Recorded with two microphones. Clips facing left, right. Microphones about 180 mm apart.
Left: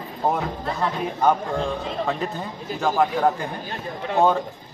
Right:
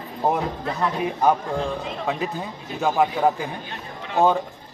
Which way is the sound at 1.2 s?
5° right (ahead or behind).